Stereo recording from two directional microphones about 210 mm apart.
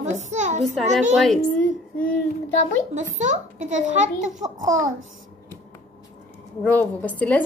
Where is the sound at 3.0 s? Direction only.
35° right (ahead or behind).